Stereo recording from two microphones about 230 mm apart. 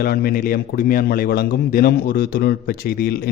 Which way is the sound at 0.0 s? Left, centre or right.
Left.